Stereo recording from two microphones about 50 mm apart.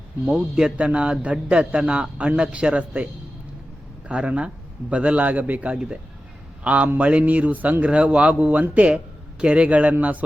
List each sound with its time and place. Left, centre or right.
0.3 s a man's voice: centre
0.8 s a man's voice: right
4.1 s a man's voice: right
5.7 s a man's voice: centre
7.9 s a man's voice: right